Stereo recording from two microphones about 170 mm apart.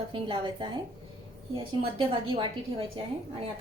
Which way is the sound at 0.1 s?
30° right (ahead or behind).